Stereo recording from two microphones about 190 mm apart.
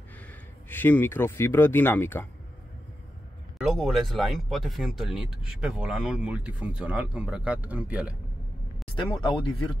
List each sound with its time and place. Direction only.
0.3 s speech: 10° left (ahead or behind)
3.5 s speech: centre (ahead or behind)
8.9 s speech: 25° left (ahead or behind)